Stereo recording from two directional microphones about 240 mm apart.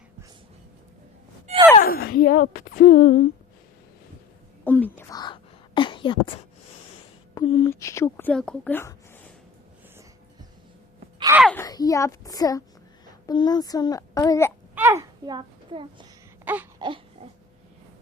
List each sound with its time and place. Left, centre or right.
1.8 s speech: left
4.6 s a sound: centre
7.5 s a woman's voice: centre
11.2 s wail: centre
11.4 s a woman's voice: centre
14.8 s a child's voice: centre
16.5 s wail: centre